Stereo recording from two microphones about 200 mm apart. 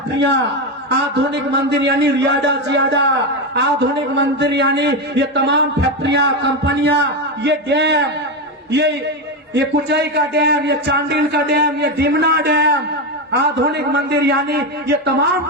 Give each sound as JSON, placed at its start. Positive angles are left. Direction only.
{"t": 0.9, "sound": "a man's voice", "side_deg": -60}
{"t": 4.1, "sound": "a man's voice", "side_deg": -60}
{"t": 9.6, "sound": "a man's voice", "side_deg": -55}